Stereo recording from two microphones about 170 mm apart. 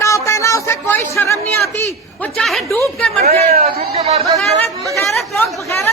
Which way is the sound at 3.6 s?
40° right (ahead or behind).